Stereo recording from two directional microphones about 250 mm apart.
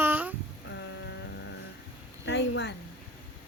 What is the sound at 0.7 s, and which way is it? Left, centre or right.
Vehicle, left.